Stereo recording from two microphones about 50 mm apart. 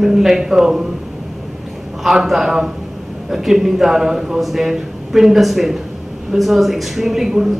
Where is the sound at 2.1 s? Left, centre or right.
Centre.